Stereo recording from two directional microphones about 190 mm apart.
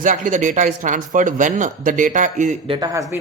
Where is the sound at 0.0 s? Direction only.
40° right (ahead or behind).